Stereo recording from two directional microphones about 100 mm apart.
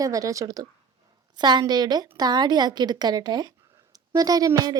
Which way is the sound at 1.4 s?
45° right (ahead or behind).